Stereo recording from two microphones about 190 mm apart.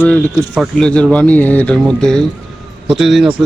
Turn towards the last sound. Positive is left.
turn(degrees=0)  # may be behind; listen again after turning